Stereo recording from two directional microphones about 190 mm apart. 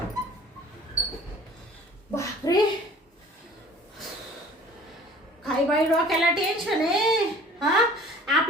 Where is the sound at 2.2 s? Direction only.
20° left (ahead or behind).